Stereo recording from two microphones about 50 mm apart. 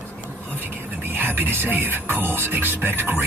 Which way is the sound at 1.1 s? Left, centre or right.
Right.